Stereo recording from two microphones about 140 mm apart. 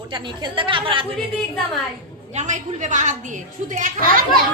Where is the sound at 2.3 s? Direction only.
60° right (ahead or behind).